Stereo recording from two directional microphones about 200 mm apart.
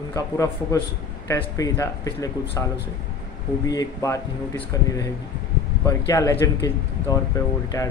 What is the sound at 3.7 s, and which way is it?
A man's voice, 15° left (ahead or behind).